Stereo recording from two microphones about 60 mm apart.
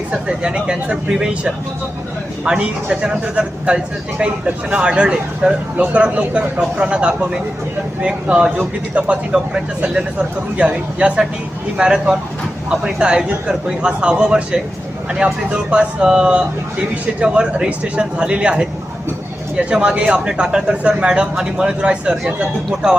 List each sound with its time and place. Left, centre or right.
0.1 s speech: centre